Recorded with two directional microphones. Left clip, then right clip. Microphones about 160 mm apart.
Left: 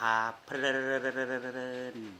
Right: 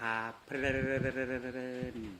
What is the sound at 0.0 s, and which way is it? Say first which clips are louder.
Speech: left 7 dB; 20° right (ahead or behind).